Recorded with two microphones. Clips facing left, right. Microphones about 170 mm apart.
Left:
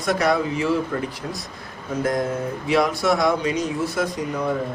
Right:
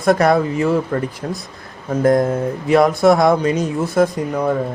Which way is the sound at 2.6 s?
50° right (ahead or behind).